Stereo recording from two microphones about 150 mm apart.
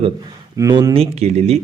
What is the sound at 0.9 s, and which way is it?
Speech, 45° right (ahead or behind).